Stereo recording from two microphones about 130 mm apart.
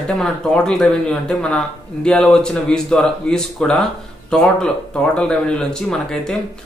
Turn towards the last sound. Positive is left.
turn(degrees=5)  # may be behind; listen again after turning